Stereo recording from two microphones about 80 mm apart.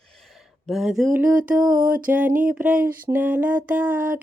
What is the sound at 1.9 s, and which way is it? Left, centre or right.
Speech, centre.